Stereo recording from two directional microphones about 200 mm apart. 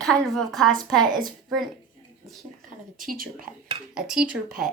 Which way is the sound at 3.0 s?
45° right (ahead or behind).